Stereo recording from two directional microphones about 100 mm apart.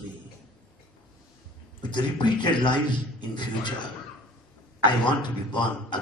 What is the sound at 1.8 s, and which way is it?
A man's voice, 50° left (ahead or behind).